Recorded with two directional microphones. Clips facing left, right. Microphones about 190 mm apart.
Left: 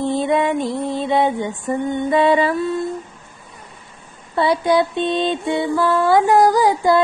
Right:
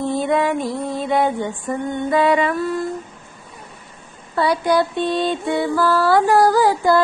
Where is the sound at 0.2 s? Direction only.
20° left (ahead or behind).